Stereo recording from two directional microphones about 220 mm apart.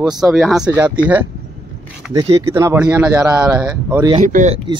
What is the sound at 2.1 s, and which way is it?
Speech, 15° right (ahead or behind).